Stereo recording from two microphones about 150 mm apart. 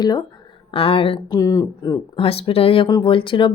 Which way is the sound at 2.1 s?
40° left (ahead or behind).